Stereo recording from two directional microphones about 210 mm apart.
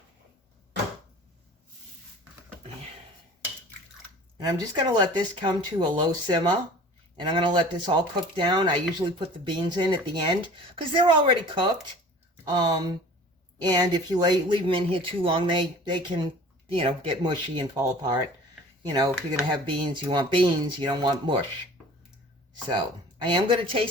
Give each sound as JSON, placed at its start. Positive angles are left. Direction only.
{"t": 4.4, "sound": "speech", "side_deg": -20}
{"t": 22.5, "sound": "speech", "side_deg": -20}